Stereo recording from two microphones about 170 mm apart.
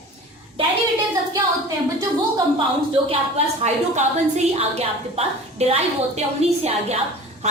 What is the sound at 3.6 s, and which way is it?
A woman's voice, 40° right (ahead or behind).